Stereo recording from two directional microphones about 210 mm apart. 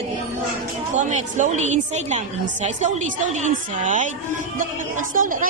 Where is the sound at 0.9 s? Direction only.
35° right (ahead or behind).